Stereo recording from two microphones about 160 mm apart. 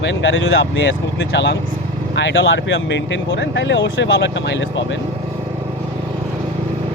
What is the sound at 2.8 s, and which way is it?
Speech, 90° left.